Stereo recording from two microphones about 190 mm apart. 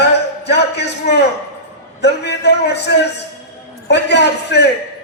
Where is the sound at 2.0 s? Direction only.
65° left (ahead or behind).